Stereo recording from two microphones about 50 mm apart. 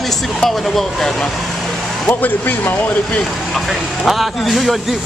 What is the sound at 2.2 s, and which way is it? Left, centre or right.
Speech, left.